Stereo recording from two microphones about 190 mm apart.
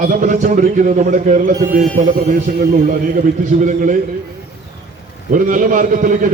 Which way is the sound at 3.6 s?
40° right (ahead or behind).